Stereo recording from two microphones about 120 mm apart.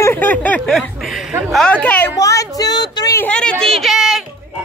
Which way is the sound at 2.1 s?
25° left (ahead or behind).